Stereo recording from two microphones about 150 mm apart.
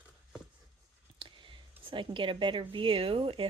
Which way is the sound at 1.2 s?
35° right (ahead or behind).